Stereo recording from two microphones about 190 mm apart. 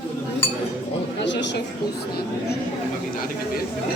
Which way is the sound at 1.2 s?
70° left (ahead or behind).